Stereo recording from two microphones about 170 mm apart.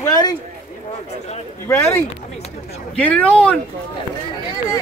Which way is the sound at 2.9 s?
5° left (ahead or behind).